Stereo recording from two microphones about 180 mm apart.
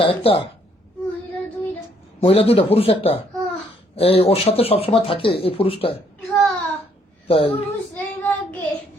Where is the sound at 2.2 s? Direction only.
35° left (ahead or behind).